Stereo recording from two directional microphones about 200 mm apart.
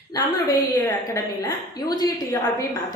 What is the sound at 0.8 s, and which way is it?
A woman's voice, 15° left (ahead or behind).